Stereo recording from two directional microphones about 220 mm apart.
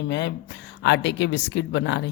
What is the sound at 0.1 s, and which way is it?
A woman's voice, 55° left (ahead or behind).